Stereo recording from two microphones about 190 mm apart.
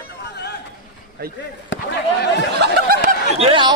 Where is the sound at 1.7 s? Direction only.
65° left (ahead or behind).